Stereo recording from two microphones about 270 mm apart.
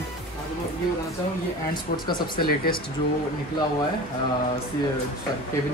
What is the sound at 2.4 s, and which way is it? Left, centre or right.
Speech, left.